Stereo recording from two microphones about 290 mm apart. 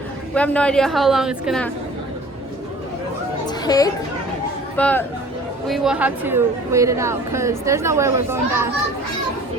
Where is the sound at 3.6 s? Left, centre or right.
Centre.